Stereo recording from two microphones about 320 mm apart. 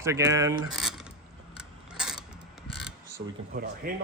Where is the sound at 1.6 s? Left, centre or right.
Centre.